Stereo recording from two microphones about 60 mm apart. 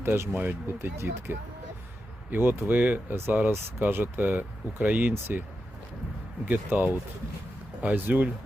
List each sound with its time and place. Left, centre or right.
0.0 s speech: right
6.5 s speech: right